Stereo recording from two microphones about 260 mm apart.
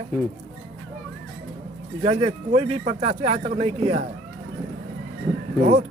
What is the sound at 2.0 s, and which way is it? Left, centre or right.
Speech, right.